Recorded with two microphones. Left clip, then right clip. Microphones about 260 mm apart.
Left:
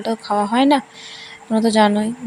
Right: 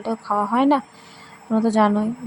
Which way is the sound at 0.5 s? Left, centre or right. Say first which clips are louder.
Left 3 dB; left.